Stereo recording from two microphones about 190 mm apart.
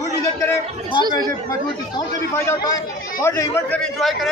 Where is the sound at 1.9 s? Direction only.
15° left (ahead or behind).